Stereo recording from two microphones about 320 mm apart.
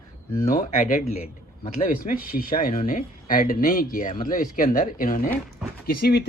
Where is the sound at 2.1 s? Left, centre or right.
Left.